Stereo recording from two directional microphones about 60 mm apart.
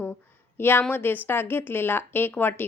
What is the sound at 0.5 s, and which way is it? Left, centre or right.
A woman's voice, left.